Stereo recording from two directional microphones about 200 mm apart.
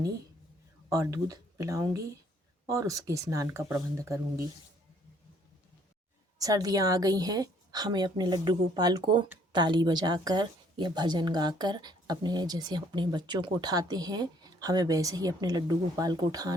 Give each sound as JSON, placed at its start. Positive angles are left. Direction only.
{"t": 0.9, "sound": "speech", "side_deg": -15}
{"t": 6.4, "sound": "a woman's voice", "side_deg": -20}